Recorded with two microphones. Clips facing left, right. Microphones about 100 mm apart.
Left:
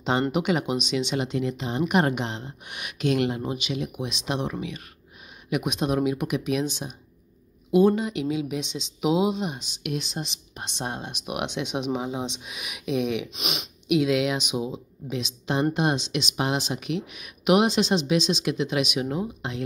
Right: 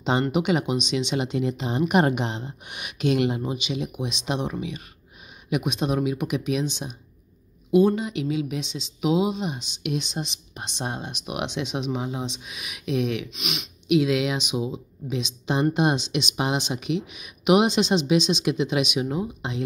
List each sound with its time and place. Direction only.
0.3 s speech: 5° right (ahead or behind)
5.6 s speech: 10° left (ahead or behind)
11.1 s speech: 10° left (ahead or behind)
13.3 s speech: 35° left (ahead or behind)
13.8 s speech: centre (ahead or behind)